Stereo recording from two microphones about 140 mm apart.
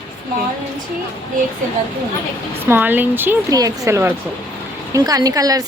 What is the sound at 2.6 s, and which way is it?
A woman's voice, 15° right (ahead or behind).